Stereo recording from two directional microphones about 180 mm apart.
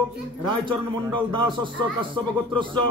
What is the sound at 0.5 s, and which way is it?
A man's voice, 25° right (ahead or behind).